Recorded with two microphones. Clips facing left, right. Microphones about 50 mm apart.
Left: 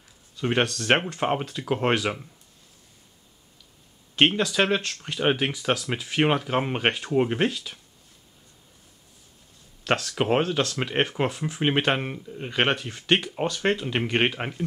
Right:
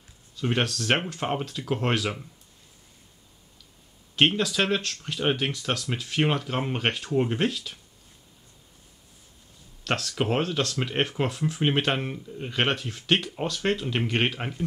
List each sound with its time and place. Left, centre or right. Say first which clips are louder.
0.4 s speech: left 2 dB; centre
4.1 s speech: left 1 dB; centre
9.8 s speech: left 3 dB; centre